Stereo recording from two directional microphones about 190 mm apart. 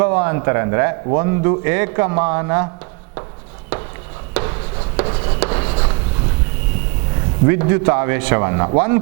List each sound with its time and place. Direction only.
0.0 s a man's voice: 15° right (ahead or behind)
4.9 s writing: 30° right (ahead or behind)
7.4 s a man's voice: 15° right (ahead or behind)